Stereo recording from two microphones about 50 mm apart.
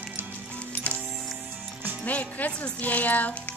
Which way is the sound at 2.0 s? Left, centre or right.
Left.